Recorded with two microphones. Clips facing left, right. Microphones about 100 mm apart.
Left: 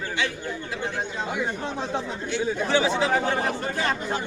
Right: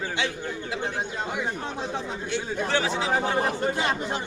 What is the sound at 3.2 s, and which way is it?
Speech, 15° right (ahead or behind).